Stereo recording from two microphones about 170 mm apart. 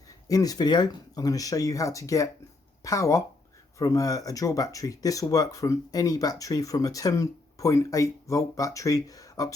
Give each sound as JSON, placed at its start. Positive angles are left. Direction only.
{"t": 0.3, "sound": "speech", "side_deg": 20}